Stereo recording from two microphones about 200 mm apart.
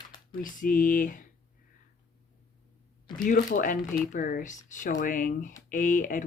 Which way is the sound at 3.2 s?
40° left (ahead or behind).